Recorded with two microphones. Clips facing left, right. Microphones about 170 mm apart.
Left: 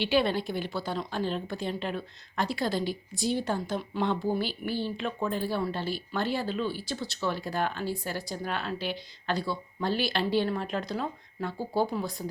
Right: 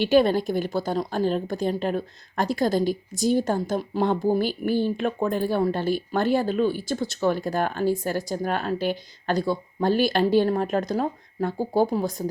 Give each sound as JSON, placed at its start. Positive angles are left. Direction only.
{"t": 0.0, "sound": "a woman's voice", "side_deg": -45}